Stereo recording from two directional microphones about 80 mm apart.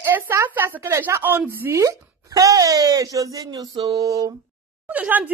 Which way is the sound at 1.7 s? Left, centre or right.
Right.